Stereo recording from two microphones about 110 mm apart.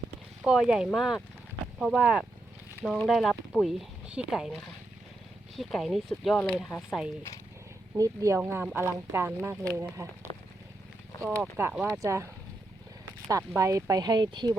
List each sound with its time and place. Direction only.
0.4 s speech: 5° right (ahead or behind)
7.9 s speech: 30° right (ahead or behind)
11.2 s speech: 25° right (ahead or behind)
11.7 s speech: 10° right (ahead or behind)
12.0 s speech: 25° right (ahead or behind)
13.5 s speech: 30° right (ahead or behind)